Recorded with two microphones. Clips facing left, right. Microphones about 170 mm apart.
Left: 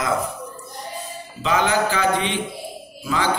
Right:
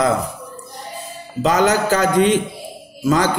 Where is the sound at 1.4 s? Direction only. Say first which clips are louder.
Right 4 dB; 40° right (ahead or behind).